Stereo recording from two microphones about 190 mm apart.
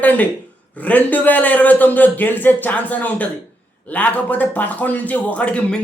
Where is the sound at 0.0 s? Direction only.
10° left (ahead or behind).